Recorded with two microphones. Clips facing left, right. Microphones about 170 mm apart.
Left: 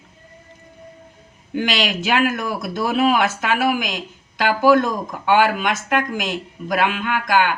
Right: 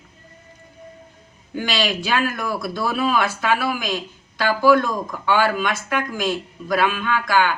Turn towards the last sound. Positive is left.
turn(degrees=15)  # may be behind; listen again after turning